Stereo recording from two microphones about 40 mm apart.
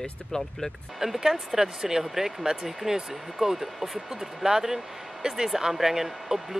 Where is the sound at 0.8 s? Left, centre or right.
Centre.